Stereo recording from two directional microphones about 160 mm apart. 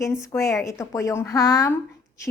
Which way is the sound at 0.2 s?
20° left (ahead or behind).